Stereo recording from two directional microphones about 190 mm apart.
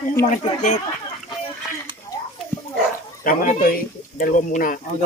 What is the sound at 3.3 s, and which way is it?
Speech, 45° left (ahead or behind).